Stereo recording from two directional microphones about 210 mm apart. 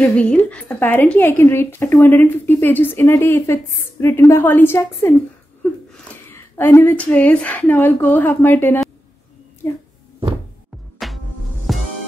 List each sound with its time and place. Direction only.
0.0 s speech: 5° left (ahead or behind)
6.3 s speech: 10° left (ahead or behind)
11.0 s music: centre (ahead or behind)